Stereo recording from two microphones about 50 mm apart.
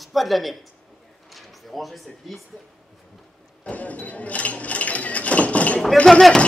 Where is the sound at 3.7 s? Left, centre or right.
Left.